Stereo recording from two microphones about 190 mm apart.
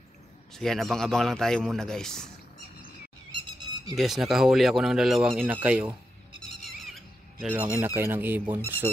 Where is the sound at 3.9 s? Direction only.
Centre (ahead or behind).